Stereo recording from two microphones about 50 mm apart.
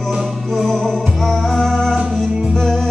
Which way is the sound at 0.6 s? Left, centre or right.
Centre.